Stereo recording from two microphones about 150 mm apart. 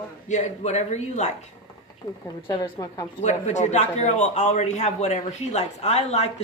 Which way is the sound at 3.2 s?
50° left (ahead or behind).